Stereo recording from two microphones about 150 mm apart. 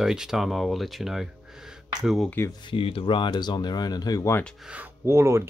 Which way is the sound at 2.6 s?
35° left (ahead or behind).